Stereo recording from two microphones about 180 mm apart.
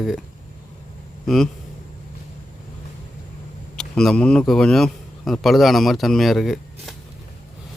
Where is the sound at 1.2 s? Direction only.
Centre (ahead or behind).